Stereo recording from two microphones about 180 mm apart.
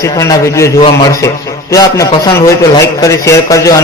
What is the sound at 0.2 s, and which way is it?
Speech, 15° left (ahead or behind).